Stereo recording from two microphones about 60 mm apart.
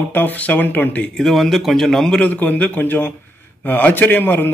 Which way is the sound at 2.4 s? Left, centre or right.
Left.